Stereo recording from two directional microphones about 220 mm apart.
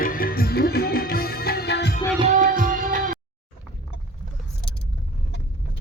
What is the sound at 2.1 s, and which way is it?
Music, 30° right (ahead or behind).